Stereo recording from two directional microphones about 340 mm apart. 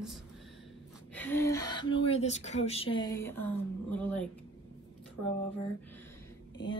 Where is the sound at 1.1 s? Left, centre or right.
Centre.